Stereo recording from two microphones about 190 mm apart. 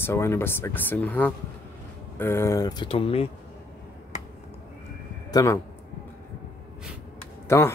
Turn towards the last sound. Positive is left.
turn(degrees=15)  # may be behind; listen again after turning